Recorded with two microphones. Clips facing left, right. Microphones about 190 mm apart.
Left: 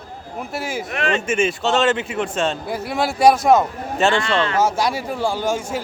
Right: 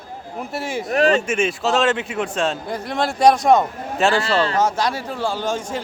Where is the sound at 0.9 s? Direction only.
35° right (ahead or behind).